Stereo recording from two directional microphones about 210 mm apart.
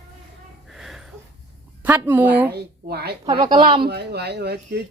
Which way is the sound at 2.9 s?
50° right (ahead or behind).